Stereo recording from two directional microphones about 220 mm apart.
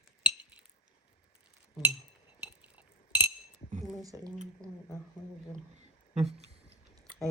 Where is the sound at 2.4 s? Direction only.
5° right (ahead or behind).